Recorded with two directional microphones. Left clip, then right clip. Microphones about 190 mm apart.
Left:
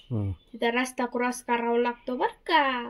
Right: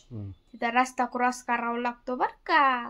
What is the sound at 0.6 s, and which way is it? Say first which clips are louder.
Speech: right 2 dB; 5° right (ahead or behind).